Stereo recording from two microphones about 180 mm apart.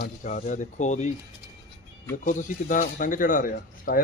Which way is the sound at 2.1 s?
45° left (ahead or behind).